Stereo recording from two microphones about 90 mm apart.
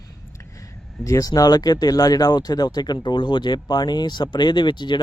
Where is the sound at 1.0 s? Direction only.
40° left (ahead or behind).